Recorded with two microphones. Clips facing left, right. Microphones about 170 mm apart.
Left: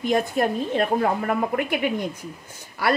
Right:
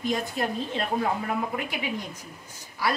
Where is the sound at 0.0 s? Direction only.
55° left (ahead or behind).